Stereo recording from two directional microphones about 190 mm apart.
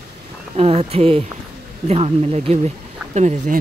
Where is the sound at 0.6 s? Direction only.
30° right (ahead or behind).